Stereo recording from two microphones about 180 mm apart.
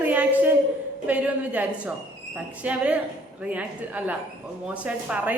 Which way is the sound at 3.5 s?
10° right (ahead or behind).